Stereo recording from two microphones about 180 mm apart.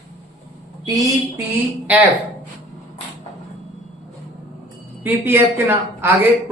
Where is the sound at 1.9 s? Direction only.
10° right (ahead or behind).